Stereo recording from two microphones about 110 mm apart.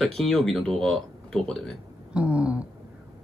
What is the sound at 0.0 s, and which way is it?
Speech, 5° left (ahead or behind).